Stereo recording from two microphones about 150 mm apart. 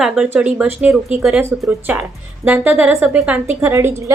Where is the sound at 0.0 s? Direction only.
5° right (ahead or behind).